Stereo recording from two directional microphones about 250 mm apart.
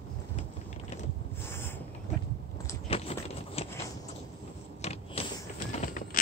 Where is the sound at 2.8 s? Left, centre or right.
Left.